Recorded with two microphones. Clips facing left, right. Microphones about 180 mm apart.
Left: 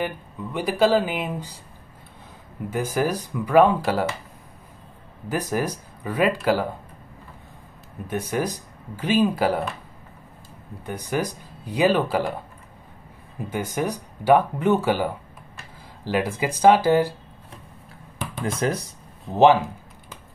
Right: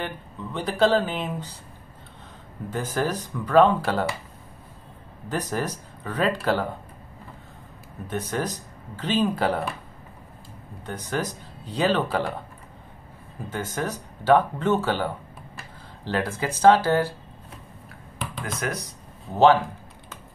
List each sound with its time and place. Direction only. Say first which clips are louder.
0.0 s speech: left 4 dB; 10° left (ahead or behind)
2.7 s speech: left 3 dB; 10° left (ahead or behind)
5.3 s speech: left 3 dB; 10° left (ahead or behind)
8.1 s speech: left 3 dB; 10° left (ahead or behind)
10.9 s speech: left 3 dB; 10° left (ahead or behind)
13.5 s speech: left 3 dB; 10° left (ahead or behind)
18.4 s speech: left 6 dB; 30° left (ahead or behind)
19.3 s speech: left 2 dB; 15° left (ahead or behind)